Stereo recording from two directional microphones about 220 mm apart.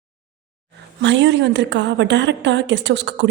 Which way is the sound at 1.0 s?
55° right (ahead or behind).